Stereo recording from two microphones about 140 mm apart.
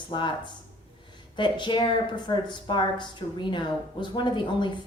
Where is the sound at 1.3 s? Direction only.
35° left (ahead or behind).